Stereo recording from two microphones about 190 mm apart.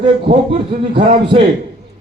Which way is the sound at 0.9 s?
30° right (ahead or behind).